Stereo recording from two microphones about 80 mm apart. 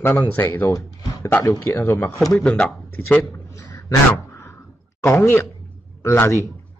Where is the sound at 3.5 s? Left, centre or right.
Left.